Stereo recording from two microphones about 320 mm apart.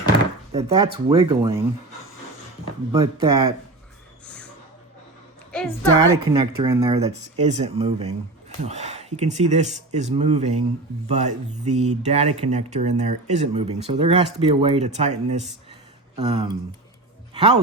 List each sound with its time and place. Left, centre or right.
0.5 s speech: centre
2.9 s speech: centre
5.5 s a sound: centre
6.0 s speech: centre